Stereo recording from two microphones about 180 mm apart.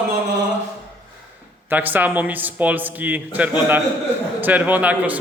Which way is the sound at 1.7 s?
10° right (ahead or behind).